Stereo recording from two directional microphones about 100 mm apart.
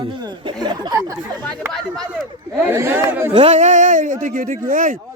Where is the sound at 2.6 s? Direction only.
20° right (ahead or behind).